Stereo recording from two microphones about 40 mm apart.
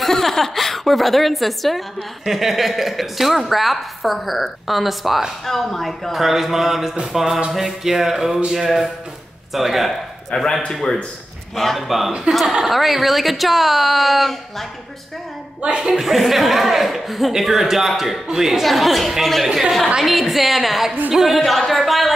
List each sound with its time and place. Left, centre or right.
0.0 s a woman's voice: centre
10.3 s speech: left
10.7 s a woman's voice: centre
15.6 s speech: right
15.9 s a woman's voice: centre
21.4 s a woman's voice: centre